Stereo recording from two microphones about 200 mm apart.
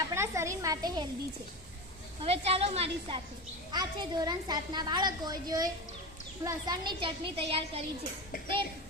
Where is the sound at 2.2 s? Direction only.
30° right (ahead or behind).